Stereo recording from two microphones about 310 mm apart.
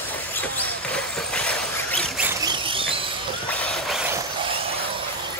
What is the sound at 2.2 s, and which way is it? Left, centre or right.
Squeal, centre.